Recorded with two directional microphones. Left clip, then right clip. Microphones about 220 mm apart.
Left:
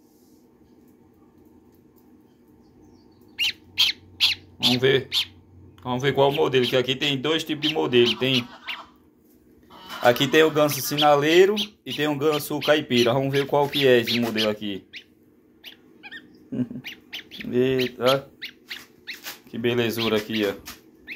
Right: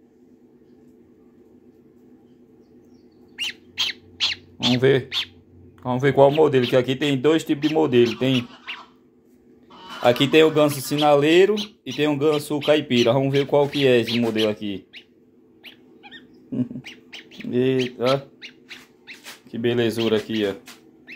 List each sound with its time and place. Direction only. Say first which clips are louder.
3.3 s squeak: left 4 dB; 15° right (ahead or behind)
4.7 s speech: right 4 dB; 35° right (ahead or behind)
8.7 s a sound: left 1 dB; 10° right (ahead or behind)
10.0 s speech: right 2 dB; 30° right (ahead or behind)
15.6 s dog: left 1 dB; 20° right (ahead or behind)
18.0 s dog: left 2 dB; 10° right (ahead or behind)
19.5 s speech: right 2 dB; 25° right (ahead or behind)